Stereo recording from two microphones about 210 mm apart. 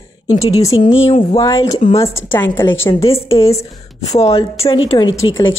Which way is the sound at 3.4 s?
15° left (ahead or behind).